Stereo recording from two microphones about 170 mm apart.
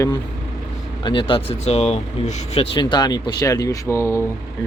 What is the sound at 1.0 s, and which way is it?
Speech, 30° left (ahead or behind).